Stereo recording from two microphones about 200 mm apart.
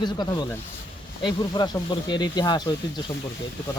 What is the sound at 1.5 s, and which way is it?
Speech, 20° left (ahead or behind).